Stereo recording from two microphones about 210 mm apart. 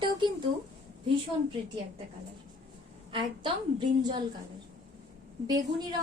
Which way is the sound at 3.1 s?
25° right (ahead or behind).